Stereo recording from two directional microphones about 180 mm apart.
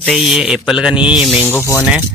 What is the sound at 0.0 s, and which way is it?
Speech, centre (ahead or behind).